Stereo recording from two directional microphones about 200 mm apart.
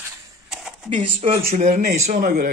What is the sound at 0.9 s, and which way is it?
Speech, 30° right (ahead or behind).